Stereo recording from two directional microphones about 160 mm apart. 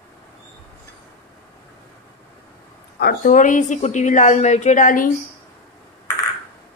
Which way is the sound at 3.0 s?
70° left (ahead or behind).